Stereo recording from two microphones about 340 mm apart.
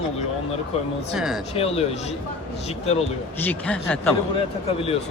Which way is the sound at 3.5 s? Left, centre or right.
Centre.